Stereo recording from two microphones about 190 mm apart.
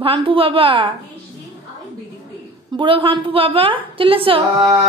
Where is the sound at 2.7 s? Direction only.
25° right (ahead or behind).